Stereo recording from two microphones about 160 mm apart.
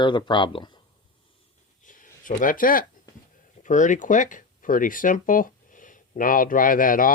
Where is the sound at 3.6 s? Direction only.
50° left (ahead or behind).